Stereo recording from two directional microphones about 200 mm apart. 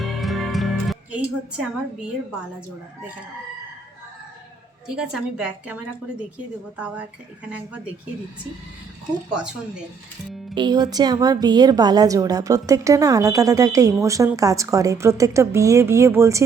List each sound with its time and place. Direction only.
0.0 s music: centre (ahead or behind)
4.9 s a woman's voice: 5° right (ahead or behind)
10.5 s a woman's voice: 20° right (ahead or behind)